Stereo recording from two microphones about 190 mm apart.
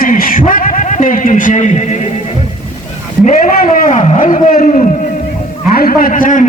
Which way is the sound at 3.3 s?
45° left (ahead or behind).